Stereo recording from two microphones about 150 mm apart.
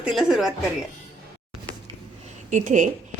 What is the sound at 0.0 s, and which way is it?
Speech, 5° right (ahead or behind).